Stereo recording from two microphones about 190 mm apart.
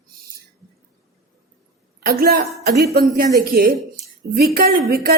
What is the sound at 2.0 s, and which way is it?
A woman's voice, 55° right (ahead or behind).